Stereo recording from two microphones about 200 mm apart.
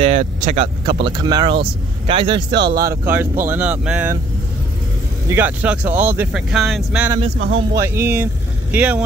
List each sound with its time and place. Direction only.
0.0 s vehicle: 30° right (ahead or behind)
1.0 s speech: 20° right (ahead or behind)
2.5 s speech: 60° right (ahead or behind)
2.8 s speech: 10° right (ahead or behind)
5.3 s speech: 10° right (ahead or behind)
7.3 s speech: 65° right (ahead or behind)
7.8 s speech: 10° right (ahead or behind)